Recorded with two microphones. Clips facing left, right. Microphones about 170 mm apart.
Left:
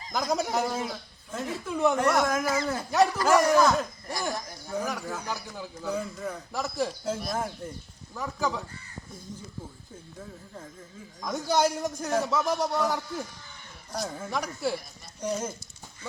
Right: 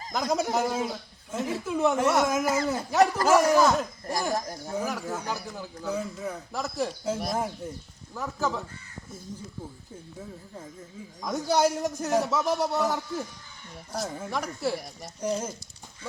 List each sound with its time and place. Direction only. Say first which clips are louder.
0.1 s a man's voice: right 1 dB; centre (ahead or behind)
4.4 s speech: right 6 dB; 40° right (ahead or behind)
4.7 s a man's voice: right 1 dB; 5° right (ahead or behind)
10.2 s a man's voice: right 1 dB; 5° right (ahead or behind)